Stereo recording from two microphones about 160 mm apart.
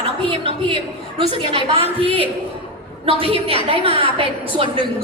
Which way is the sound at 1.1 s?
35° right (ahead or behind).